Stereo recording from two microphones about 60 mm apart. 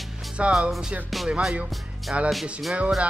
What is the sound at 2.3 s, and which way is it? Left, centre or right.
Speech, centre.